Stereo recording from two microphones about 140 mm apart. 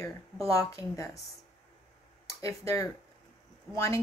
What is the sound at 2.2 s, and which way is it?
Speech, 20° left (ahead or behind).